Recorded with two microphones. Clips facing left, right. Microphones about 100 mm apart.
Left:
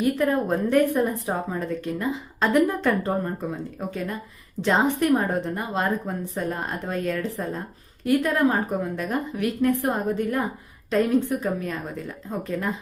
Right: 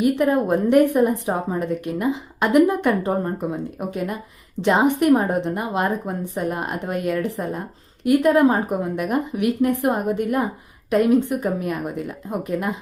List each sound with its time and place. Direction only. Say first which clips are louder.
0.0 s a woman's voice: right 4 dB; 20° right (ahead or behind)